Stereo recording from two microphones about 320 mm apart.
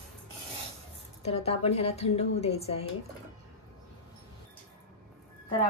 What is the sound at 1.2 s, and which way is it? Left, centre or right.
Speech, centre.